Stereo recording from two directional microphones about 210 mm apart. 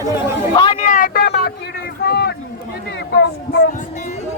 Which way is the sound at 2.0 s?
50° left (ahead or behind).